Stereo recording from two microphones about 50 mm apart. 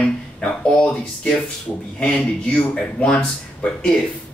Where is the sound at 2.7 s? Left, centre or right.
Centre.